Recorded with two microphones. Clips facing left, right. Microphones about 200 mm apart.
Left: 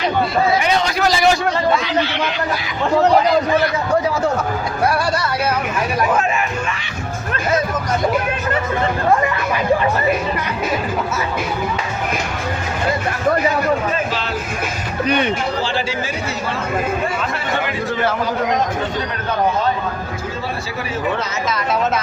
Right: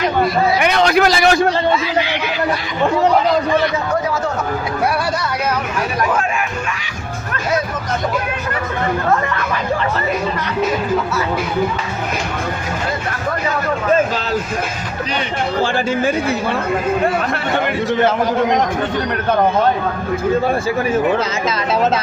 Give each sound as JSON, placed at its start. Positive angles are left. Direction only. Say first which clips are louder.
{"t": 0.6, "sound": "a man's voice", "louder": "right 4 dB", "side_deg": -65}
{"t": 15.6, "sound": "speech", "louder": "right 5 dB", "side_deg": -50}